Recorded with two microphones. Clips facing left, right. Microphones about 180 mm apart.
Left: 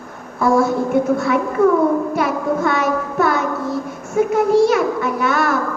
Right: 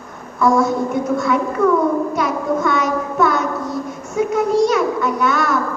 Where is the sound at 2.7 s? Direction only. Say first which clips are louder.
Even; 55° left (ahead or behind).